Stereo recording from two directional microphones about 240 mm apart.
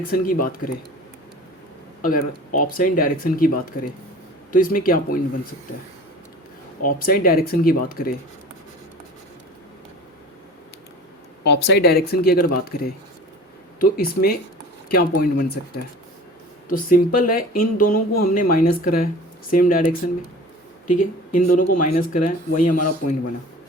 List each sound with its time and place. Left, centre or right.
0.0 s speech: left
2.0 s speech: left
6.8 s speech: left
11.4 s speech: left